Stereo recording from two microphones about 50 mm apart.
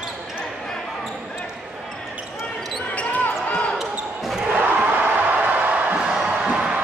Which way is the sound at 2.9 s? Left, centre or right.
Left.